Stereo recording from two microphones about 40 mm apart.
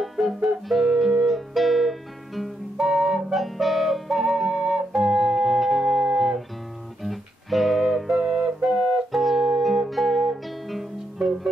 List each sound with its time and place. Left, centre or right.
0.0 s music: centre
8.2 s music: centre
8.8 s music: centre